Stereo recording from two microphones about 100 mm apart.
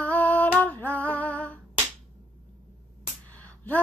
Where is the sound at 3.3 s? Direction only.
15° left (ahead or behind).